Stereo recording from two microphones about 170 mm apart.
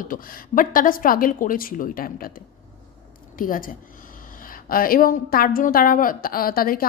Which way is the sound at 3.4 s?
55° left (ahead or behind).